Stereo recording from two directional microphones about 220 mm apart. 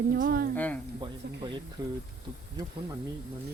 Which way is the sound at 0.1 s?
40° right (ahead or behind).